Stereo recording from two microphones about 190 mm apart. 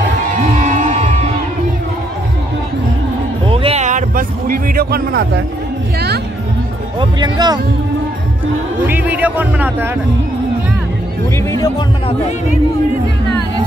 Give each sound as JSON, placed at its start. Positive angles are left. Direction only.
{"t": 0.4, "sound": "crowd", "side_deg": -40}
{"t": 3.4, "sound": "music", "side_deg": -30}
{"t": 5.9, "sound": "speech", "side_deg": -60}
{"t": 7.0, "sound": "speech", "side_deg": -20}
{"t": 8.7, "sound": "a man's voice", "side_deg": -10}
{"t": 11.3, "sound": "speech", "side_deg": 15}